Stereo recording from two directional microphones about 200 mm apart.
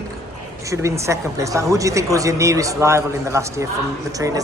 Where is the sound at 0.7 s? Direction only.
15° right (ahead or behind).